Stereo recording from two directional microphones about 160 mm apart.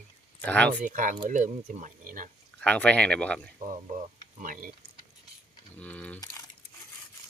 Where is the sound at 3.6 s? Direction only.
50° right (ahead or behind).